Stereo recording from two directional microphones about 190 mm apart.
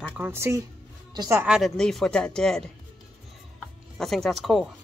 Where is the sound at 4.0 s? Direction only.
Centre (ahead or behind).